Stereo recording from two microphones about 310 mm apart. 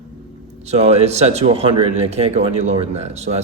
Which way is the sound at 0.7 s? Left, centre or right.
Centre.